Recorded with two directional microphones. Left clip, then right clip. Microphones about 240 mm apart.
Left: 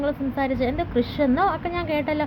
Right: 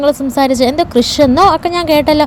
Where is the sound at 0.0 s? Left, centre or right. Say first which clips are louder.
Right 13 dB; right.